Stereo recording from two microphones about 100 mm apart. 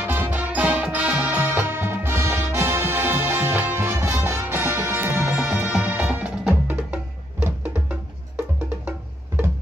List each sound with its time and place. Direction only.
0.0 s music: 20° right (ahead or behind)